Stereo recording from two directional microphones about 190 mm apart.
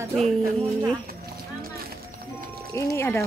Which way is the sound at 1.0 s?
55° right (ahead or behind).